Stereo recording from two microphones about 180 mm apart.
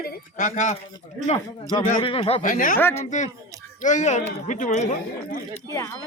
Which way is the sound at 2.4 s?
50° left (ahead or behind).